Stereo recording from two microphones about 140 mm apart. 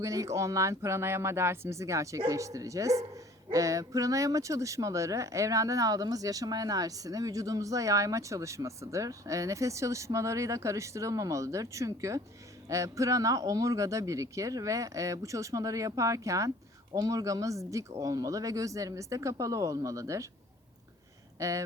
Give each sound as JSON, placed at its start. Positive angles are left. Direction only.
{"t": 0.0, "sound": "speech", "side_deg": -20}
{"t": 21.3, "sound": "speech", "side_deg": -20}